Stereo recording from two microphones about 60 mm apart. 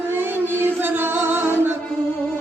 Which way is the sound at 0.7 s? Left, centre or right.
Right.